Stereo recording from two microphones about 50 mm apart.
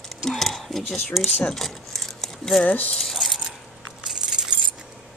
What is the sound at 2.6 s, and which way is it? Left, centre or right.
Speech, left.